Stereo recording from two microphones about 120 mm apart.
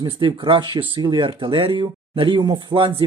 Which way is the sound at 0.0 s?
40° right (ahead or behind).